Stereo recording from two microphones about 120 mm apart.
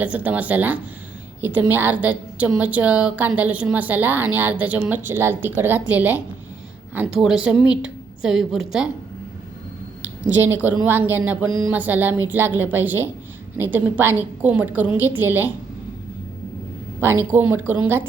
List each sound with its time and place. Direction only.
0.0 s a woman's voice: 15° right (ahead or behind)
10.0 s a woman's voice: 15° right (ahead or behind)
17.0 s a woman's voice: 20° right (ahead or behind)